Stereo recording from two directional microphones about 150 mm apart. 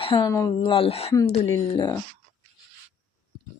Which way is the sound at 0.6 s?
40° left (ahead or behind).